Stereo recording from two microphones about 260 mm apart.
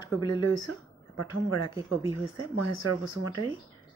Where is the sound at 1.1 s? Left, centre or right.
Left.